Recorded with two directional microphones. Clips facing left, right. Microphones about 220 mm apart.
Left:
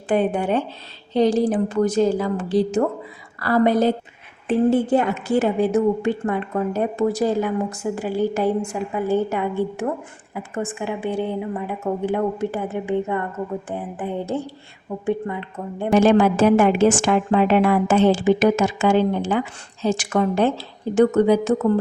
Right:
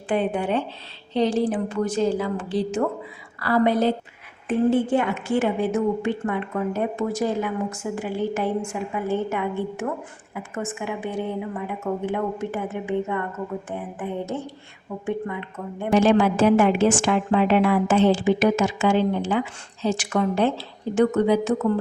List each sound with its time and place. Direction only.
0.1 s a woman's voice: 45° left (ahead or behind)
16.0 s a woman's voice: 45° left (ahead or behind)